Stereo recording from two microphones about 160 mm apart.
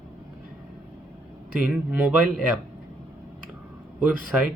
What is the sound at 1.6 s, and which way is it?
A man's voice, 10° right (ahead or behind).